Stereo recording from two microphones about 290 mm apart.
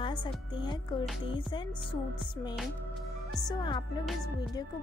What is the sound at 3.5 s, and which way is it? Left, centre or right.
Speech, centre.